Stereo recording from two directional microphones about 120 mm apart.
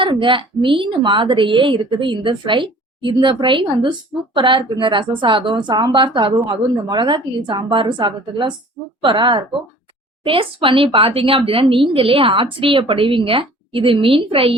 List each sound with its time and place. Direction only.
0.0 s a woman's voice: 45° right (ahead or behind)